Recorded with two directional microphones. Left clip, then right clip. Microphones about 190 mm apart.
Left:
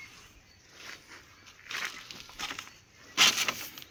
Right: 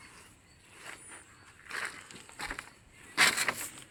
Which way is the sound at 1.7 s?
25° left (ahead or behind).